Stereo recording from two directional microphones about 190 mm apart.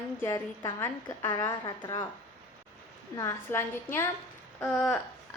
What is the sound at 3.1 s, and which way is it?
A woman's voice, 15° left (ahead or behind).